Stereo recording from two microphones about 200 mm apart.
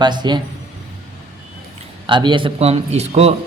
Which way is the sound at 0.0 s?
20° right (ahead or behind).